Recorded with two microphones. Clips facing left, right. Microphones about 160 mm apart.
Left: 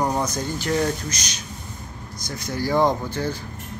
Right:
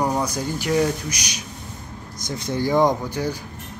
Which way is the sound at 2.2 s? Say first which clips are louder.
Right 3 dB; 25° right (ahead or behind).